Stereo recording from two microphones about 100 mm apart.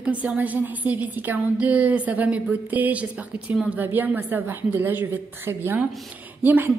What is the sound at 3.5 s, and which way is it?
A woman's voice, 10° right (ahead or behind).